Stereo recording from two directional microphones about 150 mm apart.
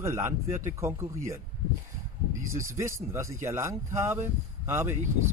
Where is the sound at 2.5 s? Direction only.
20° right (ahead or behind).